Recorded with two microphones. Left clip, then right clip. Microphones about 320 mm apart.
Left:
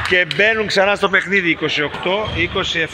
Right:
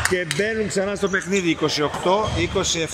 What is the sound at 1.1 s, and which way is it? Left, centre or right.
Speech, centre.